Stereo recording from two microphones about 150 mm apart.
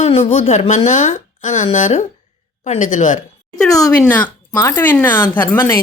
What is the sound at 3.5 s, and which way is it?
A woman's voice, 20° left (ahead or behind).